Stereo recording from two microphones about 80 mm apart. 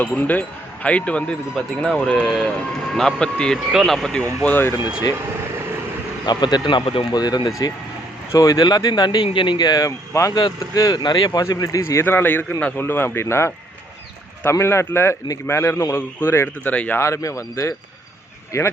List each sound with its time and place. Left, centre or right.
0.1 s speech: left
2.2 s speech: centre
3.7 s speech: centre
4.4 s speech: left
6.2 s speech: left
11.0 s speech: left
11.3 s speech: left
12.0 s speech: left
14.6 s speech: left
16.6 s speech: centre
17.0 s speech: left